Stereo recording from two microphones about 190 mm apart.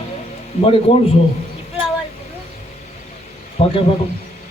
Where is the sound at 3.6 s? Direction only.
30° left (ahead or behind).